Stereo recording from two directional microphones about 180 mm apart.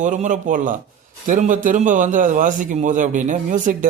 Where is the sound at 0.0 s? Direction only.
45° right (ahead or behind).